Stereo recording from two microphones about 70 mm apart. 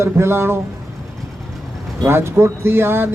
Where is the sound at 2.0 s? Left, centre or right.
Right.